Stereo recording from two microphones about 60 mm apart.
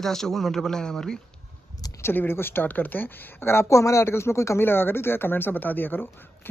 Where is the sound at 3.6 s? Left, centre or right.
Left.